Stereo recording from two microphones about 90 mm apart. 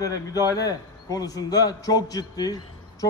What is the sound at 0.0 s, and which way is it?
A man's voice, 45° left (ahead or behind).